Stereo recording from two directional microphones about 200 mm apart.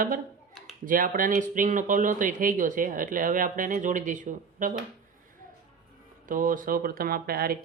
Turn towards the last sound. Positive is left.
turn(degrees=-50)  # may be behind; listen again after turning